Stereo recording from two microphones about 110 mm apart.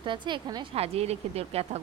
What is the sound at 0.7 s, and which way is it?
Speech, 70° right (ahead or behind).